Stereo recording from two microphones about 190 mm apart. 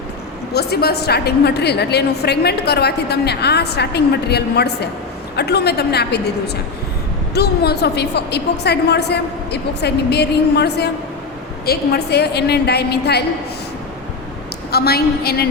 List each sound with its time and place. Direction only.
0.5 s a woman's voice: 55° left (ahead or behind)
7.3 s a woman's voice: 60° left (ahead or behind)
14.7 s a woman's voice: 55° left (ahead or behind)